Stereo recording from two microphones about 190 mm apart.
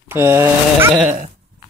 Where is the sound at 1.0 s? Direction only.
40° right (ahead or behind).